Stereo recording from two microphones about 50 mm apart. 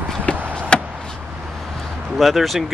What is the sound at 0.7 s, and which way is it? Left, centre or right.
Vehicle, centre.